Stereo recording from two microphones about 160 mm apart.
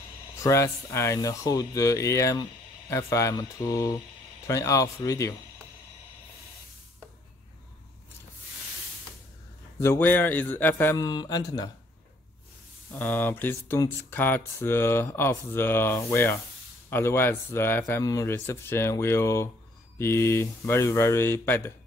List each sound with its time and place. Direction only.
0.4 s speech: 20° left (ahead or behind)
9.8 s speech: 15° left (ahead or behind)
12.9 s speech: 10° left (ahead or behind)